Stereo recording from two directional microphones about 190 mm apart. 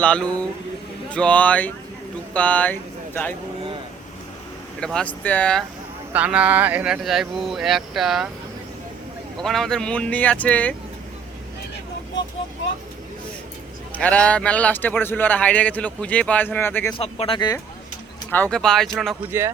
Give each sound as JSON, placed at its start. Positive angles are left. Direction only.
{"t": 0.0, "sound": "a man's voice", "side_deg": 5}
{"t": 4.8, "sound": "speech", "side_deg": 5}
{"t": 6.1, "sound": "speech", "side_deg": -5}
{"t": 9.4, "sound": "a man's voice", "side_deg": 0}
{"t": 13.9, "sound": "a man's voice", "side_deg": 5}
{"t": 17.0, "sound": "speech", "side_deg": 30}
{"t": 18.3, "sound": "speech", "side_deg": 10}
{"t": 19.3, "sound": "speech", "side_deg": -15}